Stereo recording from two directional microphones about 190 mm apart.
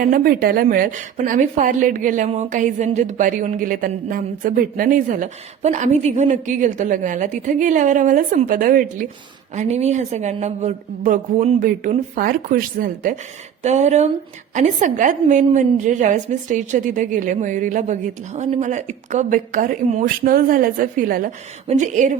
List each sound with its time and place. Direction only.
0.0 s a woman's voice: 50° right (ahead or behind)
9.6 s a woman's voice: 35° right (ahead or behind)